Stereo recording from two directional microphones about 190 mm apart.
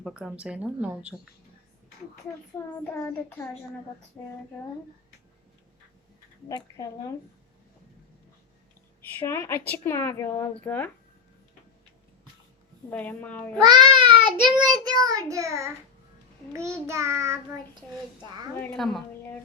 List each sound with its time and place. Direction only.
0.0 s a woman's voice: 5° right (ahead or behind)
2.8 s speech: 10° left (ahead or behind)
9.1 s speech: 10° left (ahead or behind)
12.9 s speech: 10° left (ahead or behind)
13.6 s child singing: 20° right (ahead or behind)
18.5 s speech: 5° left (ahead or behind)